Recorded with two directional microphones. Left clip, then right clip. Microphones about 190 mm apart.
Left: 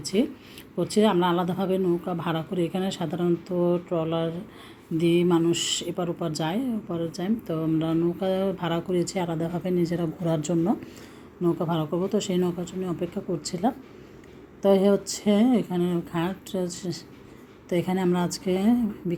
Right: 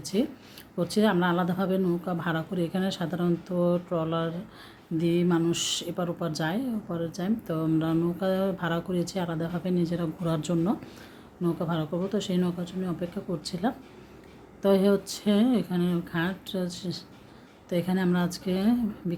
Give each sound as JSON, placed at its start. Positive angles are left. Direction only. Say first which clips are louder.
{"t": 0.0, "sound": "speech", "louder": "left 3 dB", "side_deg": -5}
{"t": 5.3, "sound": "speech", "louder": "left 3 dB", "side_deg": -5}